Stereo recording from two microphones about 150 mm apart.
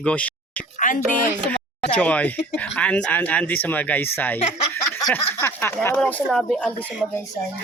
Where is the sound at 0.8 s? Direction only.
60° left (ahead or behind).